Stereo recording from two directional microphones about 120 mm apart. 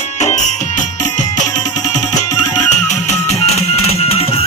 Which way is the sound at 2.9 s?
80° left.